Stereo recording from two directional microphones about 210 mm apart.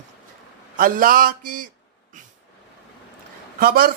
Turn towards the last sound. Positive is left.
turn(degrees=-45)  # may be behind; listen again after turning